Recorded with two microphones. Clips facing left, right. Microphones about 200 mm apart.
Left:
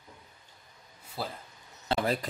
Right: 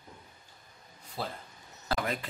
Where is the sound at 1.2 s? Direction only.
5° left (ahead or behind).